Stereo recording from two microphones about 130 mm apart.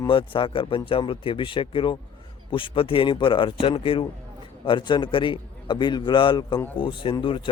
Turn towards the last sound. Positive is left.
turn(degrees=40)  # may be behind; listen again after turning